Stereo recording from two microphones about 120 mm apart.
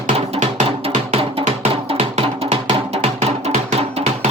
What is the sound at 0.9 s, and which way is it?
Music, 65° right (ahead or behind).